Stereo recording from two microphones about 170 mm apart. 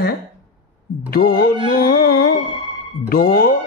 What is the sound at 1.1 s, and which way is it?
Speech, 60° left (ahead or behind).